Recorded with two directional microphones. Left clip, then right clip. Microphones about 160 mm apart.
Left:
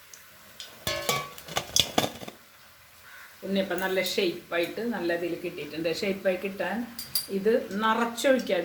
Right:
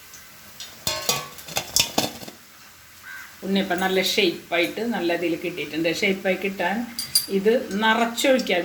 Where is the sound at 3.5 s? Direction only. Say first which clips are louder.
Right 5 dB; 50° right (ahead or behind).